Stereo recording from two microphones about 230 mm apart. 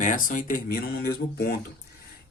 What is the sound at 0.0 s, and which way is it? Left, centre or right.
Speech, left.